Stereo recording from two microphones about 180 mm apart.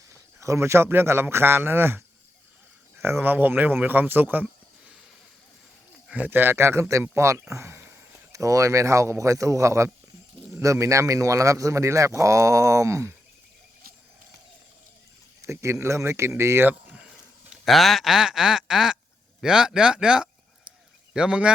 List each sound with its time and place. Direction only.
0.1 s a man's voice: 15° right (ahead or behind)
3.0 s a man's voice: 10° right (ahead or behind)
6.1 s a man's voice: 10° right (ahead or behind)
15.4 s speech: 15° right (ahead or behind)
17.5 s a sound: centre (ahead or behind)